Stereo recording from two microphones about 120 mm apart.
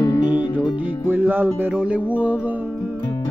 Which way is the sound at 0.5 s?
15° right (ahead or behind).